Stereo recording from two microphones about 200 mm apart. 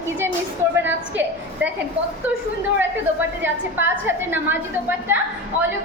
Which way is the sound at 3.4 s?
10° right (ahead or behind).